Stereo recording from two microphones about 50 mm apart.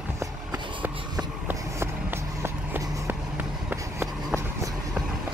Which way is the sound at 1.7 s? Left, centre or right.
Right.